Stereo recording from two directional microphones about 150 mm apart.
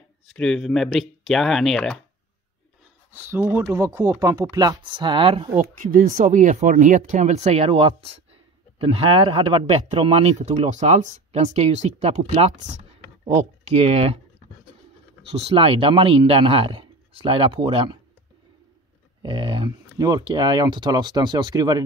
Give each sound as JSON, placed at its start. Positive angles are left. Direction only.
{"t": 0.3, "sound": "speech", "side_deg": 5}
{"t": 3.2, "sound": "speech", "side_deg": -15}
{"t": 5.6, "sound": "speech", "side_deg": -60}
{"t": 15.3, "sound": "speech", "side_deg": -40}
{"t": 19.2, "sound": "speech", "side_deg": -35}